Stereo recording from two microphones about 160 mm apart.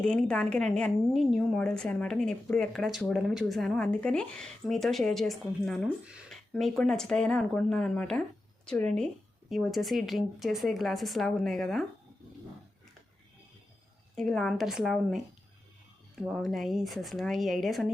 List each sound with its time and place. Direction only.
0.0 s a woman's voice: 5° left (ahead or behind)
14.2 s a woman's voice: 5° left (ahead or behind)
16.2 s a woman's voice: centre (ahead or behind)